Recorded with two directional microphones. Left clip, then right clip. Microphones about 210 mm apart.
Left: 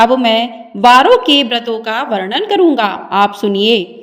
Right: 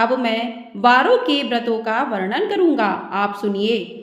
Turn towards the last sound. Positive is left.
turn(degrees=35)  # may be behind; listen again after turning